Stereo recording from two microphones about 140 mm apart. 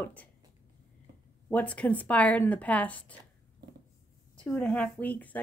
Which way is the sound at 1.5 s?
10° left (ahead or behind).